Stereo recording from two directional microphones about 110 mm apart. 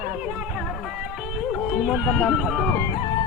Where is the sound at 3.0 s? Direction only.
50° left (ahead or behind).